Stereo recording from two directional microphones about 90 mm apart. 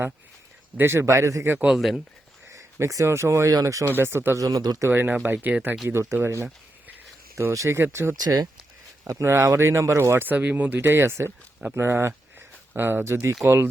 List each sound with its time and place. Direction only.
0.8 s a man's voice: 30° right (ahead or behind)
1.5 s speech: centre (ahead or behind)
2.5 s a man's voice: 35° right (ahead or behind)
3.9 s speech: 25° right (ahead or behind)
4.4 s a man's voice: 45° right (ahead or behind)
4.9 s speech: 25° right (ahead or behind)
5.9 s speech: 30° right (ahead or behind)
8.2 s speech: 45° right (ahead or behind)
9.0 s speech: 35° right (ahead or behind)